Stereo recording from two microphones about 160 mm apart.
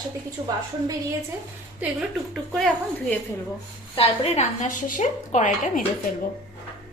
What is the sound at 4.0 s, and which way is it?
A woman's voice, 40° left (ahead or behind).